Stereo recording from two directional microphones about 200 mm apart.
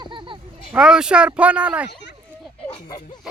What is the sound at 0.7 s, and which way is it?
Speech, 5° right (ahead or behind).